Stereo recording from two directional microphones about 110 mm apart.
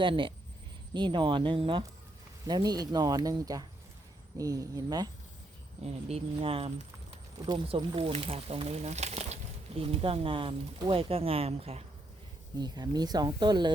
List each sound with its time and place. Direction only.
0.0 s speech: 50° right (ahead or behind)
2.5 s speech: 40° right (ahead or behind)
5.8 s speech: 70° right (ahead or behind)
12.5 s speech: 40° right (ahead or behind)